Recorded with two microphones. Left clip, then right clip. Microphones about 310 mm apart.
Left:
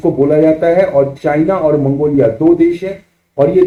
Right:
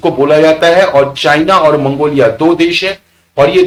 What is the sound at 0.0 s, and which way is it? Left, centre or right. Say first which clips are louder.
Speech: right 3 dB; right.